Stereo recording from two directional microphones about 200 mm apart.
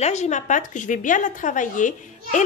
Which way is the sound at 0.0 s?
35° left (ahead or behind).